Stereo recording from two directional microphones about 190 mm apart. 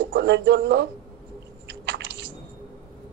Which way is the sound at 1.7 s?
75° right (ahead or behind).